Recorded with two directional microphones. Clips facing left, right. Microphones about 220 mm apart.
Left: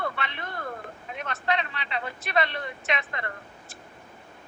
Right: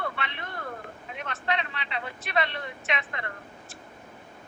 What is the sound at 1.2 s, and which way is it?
Speech, 40° left (ahead or behind).